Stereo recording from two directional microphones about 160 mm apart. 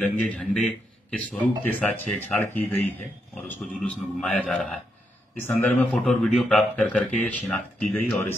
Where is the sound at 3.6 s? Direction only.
5° left (ahead or behind).